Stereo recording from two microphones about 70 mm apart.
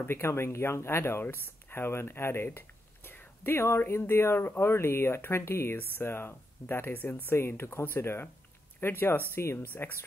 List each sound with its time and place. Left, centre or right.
0.0 s speech: left